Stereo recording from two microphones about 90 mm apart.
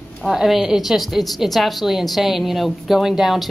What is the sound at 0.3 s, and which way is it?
A woman's voice, 5° right (ahead or behind).